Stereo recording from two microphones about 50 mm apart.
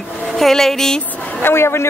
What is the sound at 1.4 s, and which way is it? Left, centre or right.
Speech, left.